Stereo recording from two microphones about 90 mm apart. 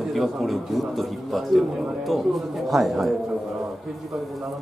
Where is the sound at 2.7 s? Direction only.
Centre (ahead or behind).